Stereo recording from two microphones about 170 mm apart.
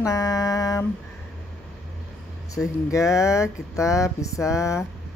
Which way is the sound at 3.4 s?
20° left (ahead or behind).